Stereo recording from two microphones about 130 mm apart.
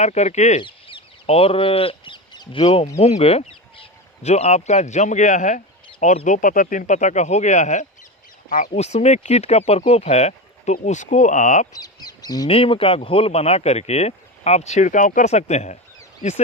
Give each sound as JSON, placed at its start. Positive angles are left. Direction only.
{"t": 0.0, "sound": "speech", "side_deg": 60}
{"t": 0.6, "sound": "speech", "side_deg": 40}
{"t": 6.2, "sound": "speech", "side_deg": 80}
{"t": 8.4, "sound": "speech", "side_deg": 85}
{"t": 11.7, "sound": "speech", "side_deg": 30}
{"t": 12.5, "sound": "speech", "side_deg": 45}